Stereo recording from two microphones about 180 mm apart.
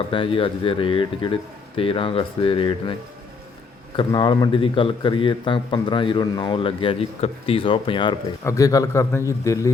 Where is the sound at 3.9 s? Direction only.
25° left (ahead or behind).